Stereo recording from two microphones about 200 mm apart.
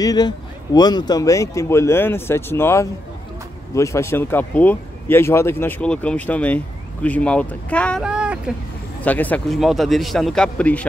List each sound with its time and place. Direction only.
0.0 s a man's voice: 20° left (ahead or behind); by 8.4 s 5° right (ahead or behind)
9.0 s speech: 10° left (ahead or behind)